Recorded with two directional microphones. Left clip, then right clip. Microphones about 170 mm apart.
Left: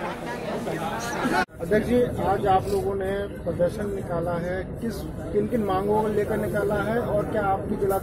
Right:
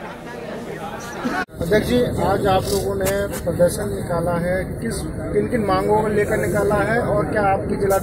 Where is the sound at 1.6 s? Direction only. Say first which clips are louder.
Right 6 dB; 40° left (ahead or behind).